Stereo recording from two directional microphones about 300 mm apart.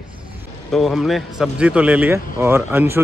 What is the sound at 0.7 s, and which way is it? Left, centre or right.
Speech, centre.